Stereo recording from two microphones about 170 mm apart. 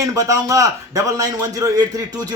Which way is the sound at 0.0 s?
20° right (ahead or behind).